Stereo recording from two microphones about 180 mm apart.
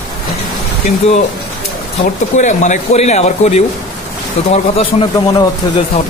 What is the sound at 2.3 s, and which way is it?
Speech, 40° left (ahead or behind).